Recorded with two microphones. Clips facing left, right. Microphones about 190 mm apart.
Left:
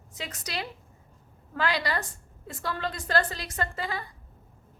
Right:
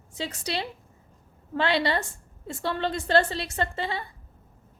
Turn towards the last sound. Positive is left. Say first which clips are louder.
# right 3 dB
turn(degrees=-25)  # may be behind; listen again after turning